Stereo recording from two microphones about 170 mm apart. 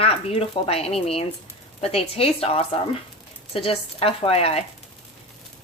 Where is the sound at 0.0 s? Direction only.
35° left (ahead or behind).